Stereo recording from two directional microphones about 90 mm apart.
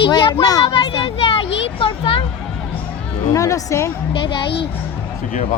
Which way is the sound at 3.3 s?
40° left (ahead or behind).